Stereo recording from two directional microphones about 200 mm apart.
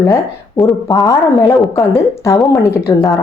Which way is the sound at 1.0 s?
15° left (ahead or behind).